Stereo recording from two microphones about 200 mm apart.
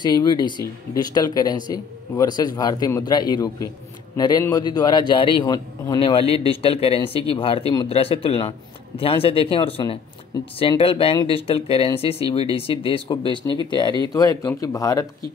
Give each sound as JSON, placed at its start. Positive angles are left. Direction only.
{"t": 0.0, "sound": "speech", "side_deg": 20}